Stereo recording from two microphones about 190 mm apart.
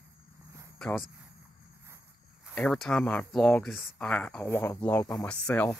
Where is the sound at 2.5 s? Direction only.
5° left (ahead or behind).